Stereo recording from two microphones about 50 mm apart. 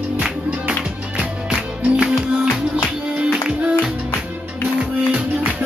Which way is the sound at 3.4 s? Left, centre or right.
Centre.